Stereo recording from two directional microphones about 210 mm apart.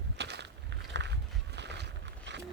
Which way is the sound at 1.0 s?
55° right (ahead or behind).